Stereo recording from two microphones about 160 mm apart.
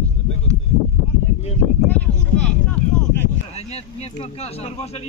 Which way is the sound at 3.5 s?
40° left (ahead or behind).